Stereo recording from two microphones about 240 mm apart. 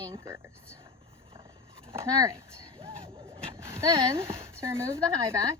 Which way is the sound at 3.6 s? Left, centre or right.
Centre.